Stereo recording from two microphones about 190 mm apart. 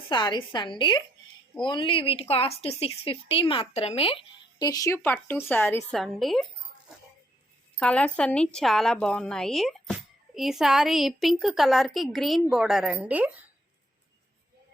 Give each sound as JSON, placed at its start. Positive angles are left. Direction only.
{"t": 0.1, "sound": "a woman's voice", "side_deg": 25}
{"t": 6.0, "sound": "a woman's voice", "side_deg": 0}
{"t": 7.8, "sound": "a woman's voice", "side_deg": 5}